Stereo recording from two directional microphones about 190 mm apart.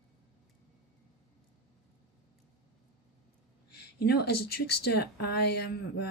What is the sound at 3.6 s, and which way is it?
Speech, 60° left (ahead or behind).